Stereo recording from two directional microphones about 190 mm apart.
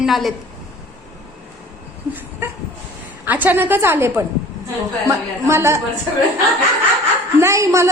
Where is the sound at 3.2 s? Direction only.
10° right (ahead or behind).